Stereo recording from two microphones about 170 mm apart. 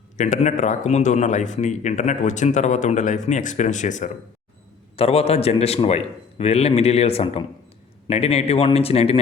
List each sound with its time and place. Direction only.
0.2 s speech: 45° left (ahead or behind)
4.9 s a man's voice: 35° left (ahead or behind)